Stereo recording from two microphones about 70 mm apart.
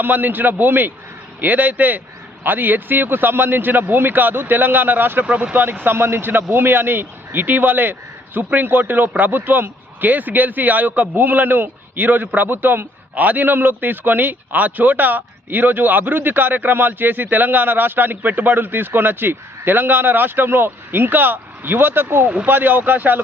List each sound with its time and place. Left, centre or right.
0.0 s speech: right